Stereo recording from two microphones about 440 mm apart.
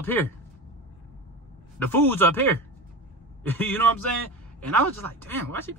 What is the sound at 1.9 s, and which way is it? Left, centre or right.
Speech, centre.